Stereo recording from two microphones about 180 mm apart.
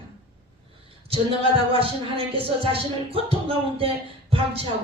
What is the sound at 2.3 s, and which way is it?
Speech, 30° right (ahead or behind).